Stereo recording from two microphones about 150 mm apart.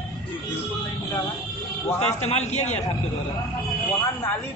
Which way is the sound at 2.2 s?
50° left (ahead or behind).